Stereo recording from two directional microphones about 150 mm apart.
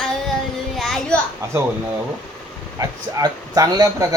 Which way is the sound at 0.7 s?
Centre (ahead or behind).